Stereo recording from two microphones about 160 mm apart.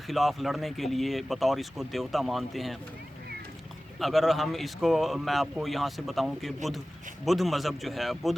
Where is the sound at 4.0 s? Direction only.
Centre (ahead or behind).